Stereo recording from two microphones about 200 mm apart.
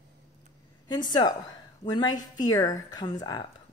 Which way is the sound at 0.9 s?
20° left (ahead or behind).